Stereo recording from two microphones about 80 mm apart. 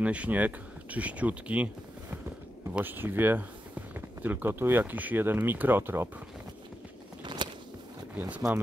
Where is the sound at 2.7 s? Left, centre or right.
Right.